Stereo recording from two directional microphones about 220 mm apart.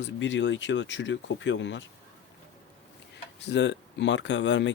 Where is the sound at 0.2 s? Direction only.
55° left (ahead or behind).